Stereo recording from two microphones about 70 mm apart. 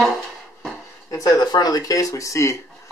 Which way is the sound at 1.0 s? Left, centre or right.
Left.